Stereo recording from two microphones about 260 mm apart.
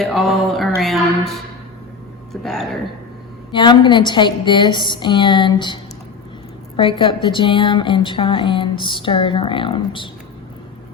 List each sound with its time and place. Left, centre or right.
0.0 s mantra: centre
2.3 s speech: centre
3.5 s a woman's voice: centre